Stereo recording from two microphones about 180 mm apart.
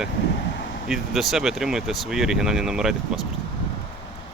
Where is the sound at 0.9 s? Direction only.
Centre (ahead or behind).